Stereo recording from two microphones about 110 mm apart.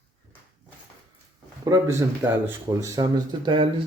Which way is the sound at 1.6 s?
30° right (ahead or behind).